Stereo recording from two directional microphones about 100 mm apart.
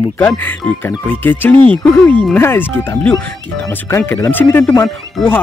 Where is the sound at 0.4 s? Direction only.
20° left (ahead or behind).